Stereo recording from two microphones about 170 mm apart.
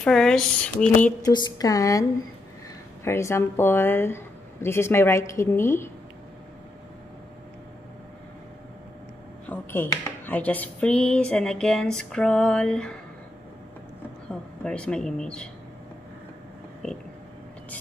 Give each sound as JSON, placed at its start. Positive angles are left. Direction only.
{"t": 0.0, "sound": "speech", "side_deg": 5}
{"t": 1.2, "sound": "speech", "side_deg": 20}
{"t": 9.5, "sound": "speech", "side_deg": 15}
{"t": 14.6, "sound": "speech", "side_deg": 5}
{"t": 16.8, "sound": "speech", "side_deg": 5}